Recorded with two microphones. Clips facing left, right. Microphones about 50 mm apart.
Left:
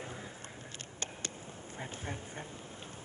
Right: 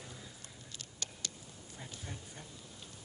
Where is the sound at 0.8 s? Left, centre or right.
Left.